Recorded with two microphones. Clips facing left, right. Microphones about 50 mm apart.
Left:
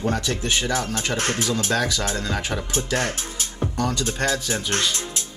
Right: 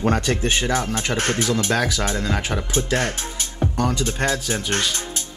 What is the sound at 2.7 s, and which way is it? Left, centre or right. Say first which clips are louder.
Speech: right 3 dB; right.